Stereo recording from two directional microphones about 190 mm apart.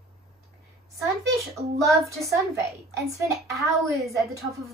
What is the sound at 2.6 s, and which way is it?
A woman's voice, 15° right (ahead or behind).